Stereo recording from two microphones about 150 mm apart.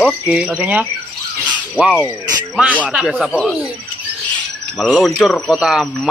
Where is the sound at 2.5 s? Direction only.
10° right (ahead or behind).